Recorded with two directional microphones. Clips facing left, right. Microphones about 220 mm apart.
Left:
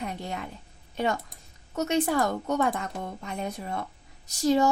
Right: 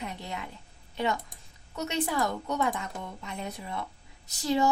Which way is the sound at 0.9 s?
45° left (ahead or behind).